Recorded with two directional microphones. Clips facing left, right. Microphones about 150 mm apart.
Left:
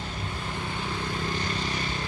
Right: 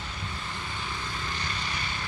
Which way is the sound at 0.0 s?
45° left (ahead or behind).